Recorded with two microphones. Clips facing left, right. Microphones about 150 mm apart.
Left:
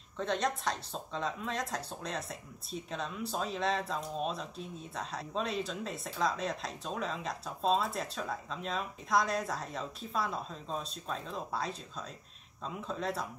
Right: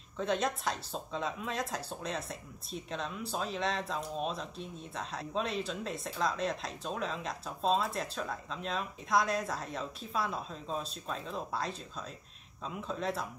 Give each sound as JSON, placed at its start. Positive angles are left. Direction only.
{"t": 0.2, "sound": "speech", "side_deg": -5}